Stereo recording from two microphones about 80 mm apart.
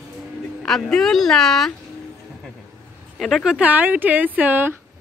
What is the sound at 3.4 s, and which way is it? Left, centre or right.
Speech, centre.